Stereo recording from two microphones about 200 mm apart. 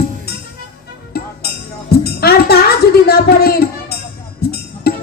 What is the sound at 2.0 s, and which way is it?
Music, 50° left (ahead or behind).